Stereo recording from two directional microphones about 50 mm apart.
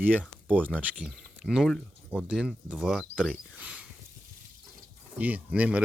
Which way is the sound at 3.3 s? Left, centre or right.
Right.